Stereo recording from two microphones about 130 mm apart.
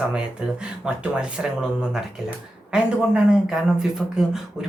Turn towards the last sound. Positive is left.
turn(degrees=-5)  # may be behind; listen again after turning